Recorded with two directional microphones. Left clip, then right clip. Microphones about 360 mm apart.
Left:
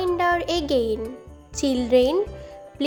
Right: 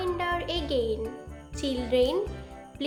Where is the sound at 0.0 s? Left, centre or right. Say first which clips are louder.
Left 8 dB; centre.